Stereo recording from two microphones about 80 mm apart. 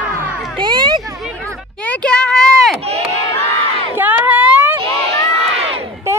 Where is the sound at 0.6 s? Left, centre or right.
Right.